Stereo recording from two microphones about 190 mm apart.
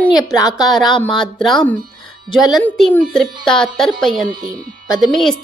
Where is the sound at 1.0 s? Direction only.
Centre (ahead or behind).